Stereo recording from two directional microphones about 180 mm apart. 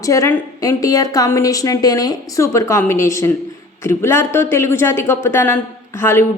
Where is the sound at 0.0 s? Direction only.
20° left (ahead or behind).